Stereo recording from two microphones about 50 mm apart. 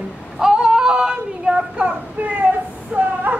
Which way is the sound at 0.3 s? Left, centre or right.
Centre.